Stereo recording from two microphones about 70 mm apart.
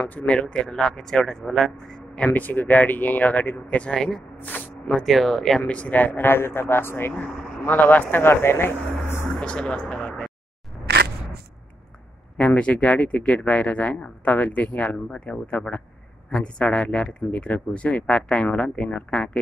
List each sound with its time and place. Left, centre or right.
0.0 s speech: left
4.4 s a sound: left
4.9 s speech: centre
5.7 s speech: centre
9.3 s speech: centre
12.4 s speech: centre